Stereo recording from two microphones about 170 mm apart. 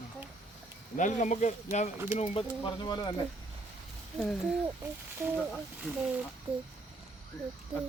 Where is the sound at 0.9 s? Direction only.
45° left (ahead or behind).